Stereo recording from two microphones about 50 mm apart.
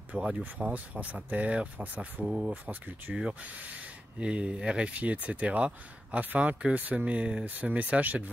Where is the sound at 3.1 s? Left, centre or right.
Centre.